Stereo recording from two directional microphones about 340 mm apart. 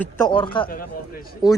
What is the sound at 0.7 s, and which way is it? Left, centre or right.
Speech, left.